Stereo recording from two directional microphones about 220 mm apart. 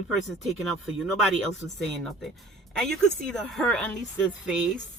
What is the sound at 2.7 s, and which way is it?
Speech, centre (ahead or behind).